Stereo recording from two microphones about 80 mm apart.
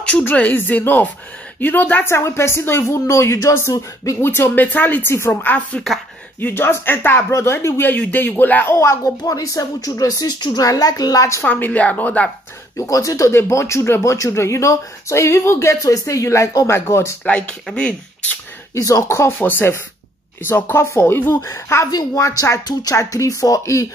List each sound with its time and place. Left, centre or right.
0.2 s speech: left
3.7 s a woman's voice: left
4.2 s speech: left
8.7 s speech: left
9.2 s a woman's voice: left
11.4 s speech: left
12.7 s a woman's voice: left
17.2 s speech: centre
18.8 s speech: left
21.9 s a woman's voice: left